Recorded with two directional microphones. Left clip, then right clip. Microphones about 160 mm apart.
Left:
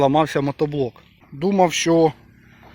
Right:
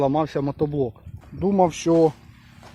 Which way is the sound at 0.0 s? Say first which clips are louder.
Left 5 dB; 20° left (ahead or behind).